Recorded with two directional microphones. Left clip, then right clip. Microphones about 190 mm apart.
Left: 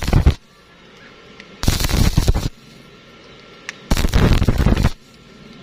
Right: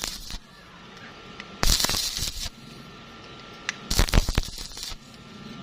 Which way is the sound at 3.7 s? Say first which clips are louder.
Even; centre (ahead or behind).